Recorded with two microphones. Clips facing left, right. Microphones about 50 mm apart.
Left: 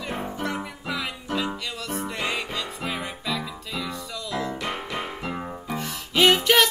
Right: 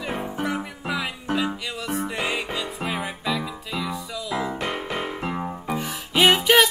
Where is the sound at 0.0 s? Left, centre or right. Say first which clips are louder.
Right 2 dB; centre.